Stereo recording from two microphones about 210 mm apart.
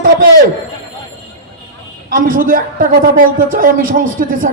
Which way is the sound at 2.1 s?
40° right (ahead or behind).